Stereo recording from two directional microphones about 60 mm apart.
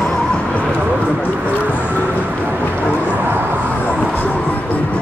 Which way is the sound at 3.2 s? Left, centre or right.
Right.